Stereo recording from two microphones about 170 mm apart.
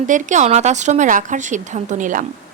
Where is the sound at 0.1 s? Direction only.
45° right (ahead or behind).